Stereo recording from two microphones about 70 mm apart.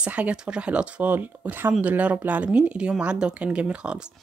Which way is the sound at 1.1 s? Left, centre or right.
Right.